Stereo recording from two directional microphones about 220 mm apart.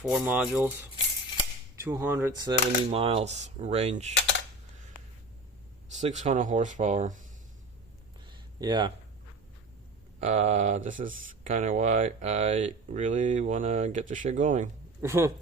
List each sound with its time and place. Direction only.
0.0 s speech: 5° right (ahead or behind)
1.7 s speech: 10° right (ahead or behind); by 4.1 s 30° right (ahead or behind)
5.9 s speech: 30° right (ahead or behind)
8.3 s a sound: 20° right (ahead or behind)
10.2 s speech: 30° right (ahead or behind)
15.0 s speech: 10° right (ahead or behind)